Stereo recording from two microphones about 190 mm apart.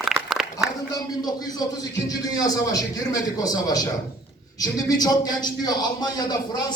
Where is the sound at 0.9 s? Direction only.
20° left (ahead or behind).